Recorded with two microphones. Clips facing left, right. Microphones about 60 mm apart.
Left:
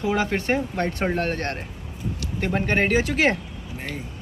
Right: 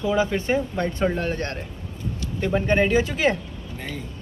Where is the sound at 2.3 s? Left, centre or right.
Left.